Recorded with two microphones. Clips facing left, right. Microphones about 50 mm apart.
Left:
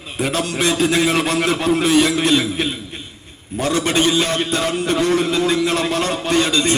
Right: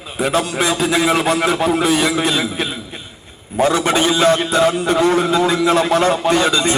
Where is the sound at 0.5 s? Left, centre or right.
Centre.